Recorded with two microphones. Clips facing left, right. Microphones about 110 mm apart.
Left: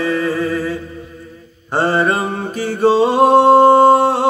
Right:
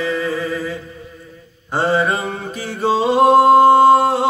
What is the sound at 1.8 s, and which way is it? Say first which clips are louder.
Mantra: left 2 dB; 45° left (ahead or behind).